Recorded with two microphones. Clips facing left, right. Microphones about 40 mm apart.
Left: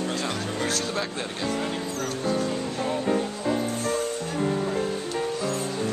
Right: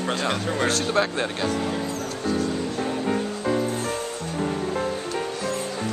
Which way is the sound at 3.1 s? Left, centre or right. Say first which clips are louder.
Right 1 dB; centre.